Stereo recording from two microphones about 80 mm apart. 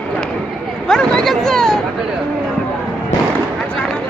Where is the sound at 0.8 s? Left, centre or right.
Centre.